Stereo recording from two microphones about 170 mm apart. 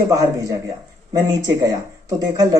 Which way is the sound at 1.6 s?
20° right (ahead or behind).